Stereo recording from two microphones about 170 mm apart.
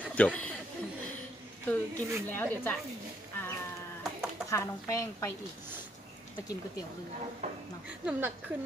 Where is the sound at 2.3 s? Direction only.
10° left (ahead or behind).